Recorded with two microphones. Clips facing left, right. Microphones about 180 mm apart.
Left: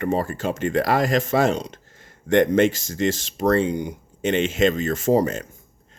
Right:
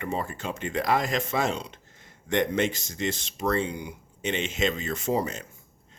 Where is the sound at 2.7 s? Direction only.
90° left.